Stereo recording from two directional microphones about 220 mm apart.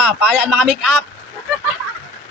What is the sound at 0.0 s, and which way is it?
A man's voice, centre (ahead or behind).